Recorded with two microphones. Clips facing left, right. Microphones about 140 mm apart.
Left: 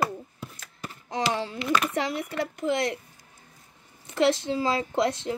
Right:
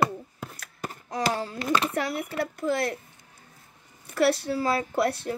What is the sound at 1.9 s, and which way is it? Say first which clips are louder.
Speech: even; 20° left (ahead or behind).